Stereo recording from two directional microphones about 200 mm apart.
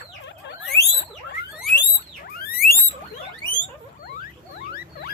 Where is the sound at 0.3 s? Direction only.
60° left (ahead or behind).